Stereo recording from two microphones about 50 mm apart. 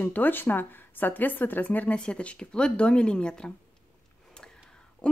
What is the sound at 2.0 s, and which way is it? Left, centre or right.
Speech, left.